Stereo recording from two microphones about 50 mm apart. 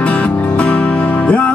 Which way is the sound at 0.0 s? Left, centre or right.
Left.